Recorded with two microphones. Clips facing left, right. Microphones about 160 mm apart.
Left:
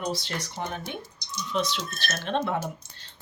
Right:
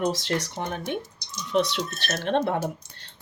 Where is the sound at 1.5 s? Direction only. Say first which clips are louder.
Right 5 dB; 65° right (ahead or behind).